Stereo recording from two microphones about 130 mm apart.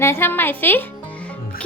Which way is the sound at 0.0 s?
20° left (ahead or behind).